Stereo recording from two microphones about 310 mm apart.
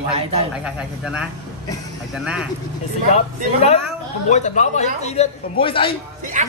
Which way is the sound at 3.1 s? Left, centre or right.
Centre.